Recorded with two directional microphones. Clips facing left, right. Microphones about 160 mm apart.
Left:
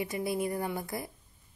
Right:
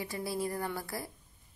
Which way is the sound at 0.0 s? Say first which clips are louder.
Left 4 dB; 20° left (ahead or behind).